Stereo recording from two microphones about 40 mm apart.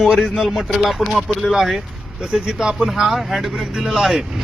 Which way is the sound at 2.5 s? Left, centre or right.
Centre.